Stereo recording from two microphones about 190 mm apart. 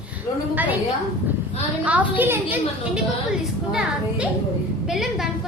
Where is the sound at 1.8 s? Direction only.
10° right (ahead or behind).